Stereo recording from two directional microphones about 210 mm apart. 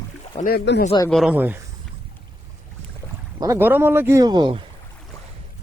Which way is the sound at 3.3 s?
15° right (ahead or behind).